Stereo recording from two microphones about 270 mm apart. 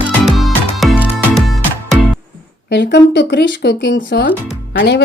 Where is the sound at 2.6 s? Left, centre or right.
Left.